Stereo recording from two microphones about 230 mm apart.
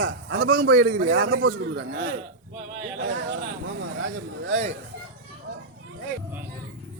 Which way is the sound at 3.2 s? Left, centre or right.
Right.